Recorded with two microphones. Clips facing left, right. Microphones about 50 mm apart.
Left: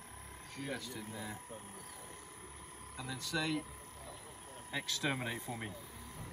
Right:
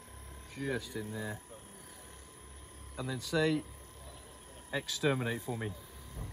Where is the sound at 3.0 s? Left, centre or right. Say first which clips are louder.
Right 7 dB; centre.